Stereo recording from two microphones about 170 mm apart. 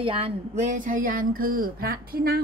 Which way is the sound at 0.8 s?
50° right (ahead or behind).